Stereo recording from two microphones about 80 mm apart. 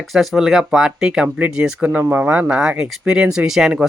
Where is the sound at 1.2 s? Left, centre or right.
Centre.